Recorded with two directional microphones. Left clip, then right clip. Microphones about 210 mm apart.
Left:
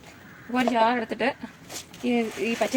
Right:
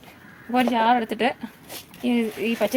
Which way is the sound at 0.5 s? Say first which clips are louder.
Right 3 dB; 35° right (ahead or behind).